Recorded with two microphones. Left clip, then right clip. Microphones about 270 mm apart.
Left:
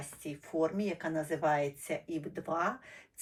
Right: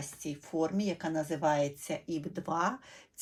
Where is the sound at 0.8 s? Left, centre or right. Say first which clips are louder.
Right 1 dB; right.